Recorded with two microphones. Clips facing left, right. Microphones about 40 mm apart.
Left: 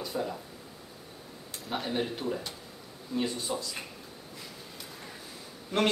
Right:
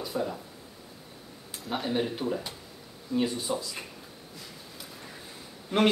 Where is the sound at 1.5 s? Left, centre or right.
Centre.